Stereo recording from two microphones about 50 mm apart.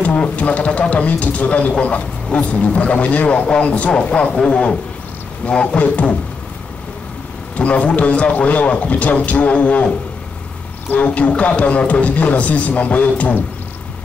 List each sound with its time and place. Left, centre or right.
0.0 s a man's voice: left
5.8 s speech: left
7.5 s speech: left
11.1 s speech: left